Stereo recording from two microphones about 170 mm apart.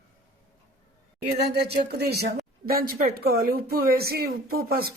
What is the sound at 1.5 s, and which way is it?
Speech, 75° right (ahead or behind).